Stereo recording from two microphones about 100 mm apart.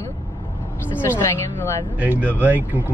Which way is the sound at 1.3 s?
25° left (ahead or behind).